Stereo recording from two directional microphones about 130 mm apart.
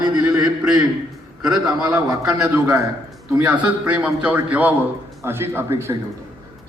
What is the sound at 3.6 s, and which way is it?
A man's voice, 10° right (ahead or behind).